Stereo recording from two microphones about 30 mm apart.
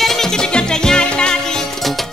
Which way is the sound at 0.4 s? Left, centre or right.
Left.